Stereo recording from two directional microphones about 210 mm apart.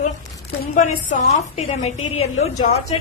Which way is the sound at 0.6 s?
40° left (ahead or behind).